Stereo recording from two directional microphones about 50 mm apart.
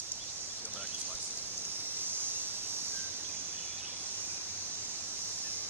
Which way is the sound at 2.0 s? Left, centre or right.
Right.